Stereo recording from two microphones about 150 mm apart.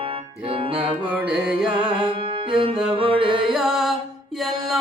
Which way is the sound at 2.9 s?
35° right (ahead or behind).